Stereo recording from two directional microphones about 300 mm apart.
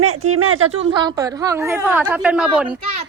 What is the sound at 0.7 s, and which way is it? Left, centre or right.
A child's voice, centre.